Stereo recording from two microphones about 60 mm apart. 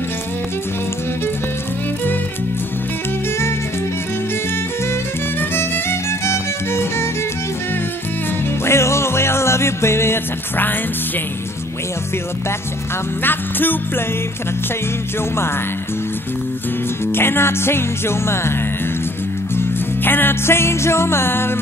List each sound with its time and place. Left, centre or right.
5.4 s music: left
8.6 s music: left
13.2 s music: left
17.0 s music: left
19.5 s music: left